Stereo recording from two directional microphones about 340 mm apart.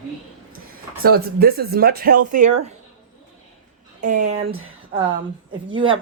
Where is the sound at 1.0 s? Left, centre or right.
Right.